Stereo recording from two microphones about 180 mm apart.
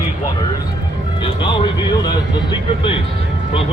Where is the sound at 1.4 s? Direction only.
25° left (ahead or behind).